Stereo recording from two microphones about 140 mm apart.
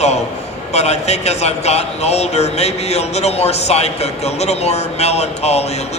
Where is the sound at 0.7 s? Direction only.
50° left (ahead or behind).